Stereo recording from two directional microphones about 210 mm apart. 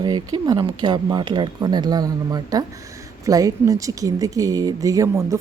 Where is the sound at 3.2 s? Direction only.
15° right (ahead or behind).